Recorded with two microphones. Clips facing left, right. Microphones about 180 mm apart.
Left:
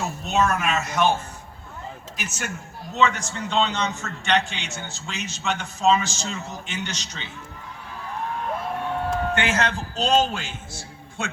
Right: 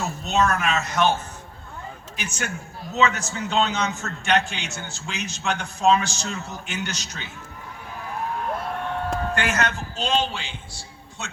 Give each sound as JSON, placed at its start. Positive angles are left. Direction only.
{"t": 0.0, "sound": "speech", "side_deg": 5}
{"t": 2.1, "sound": "a man's voice", "side_deg": 0}
{"t": 9.3, "sound": "a man's voice", "side_deg": 25}